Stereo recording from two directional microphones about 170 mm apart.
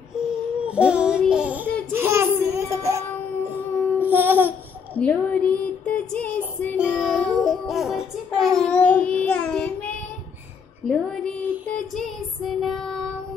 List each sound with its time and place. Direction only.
0.6 s music: 5° right (ahead or behind)
1.2 s a sound: 5° right (ahead or behind)
4.0 s babbling: 10° right (ahead or behind)
4.9 s female singing: 10° left (ahead or behind)
6.8 s music: 5° right (ahead or behind)
10.9 s a sound: 5° left (ahead or behind)
12.6 s child singing: centre (ahead or behind)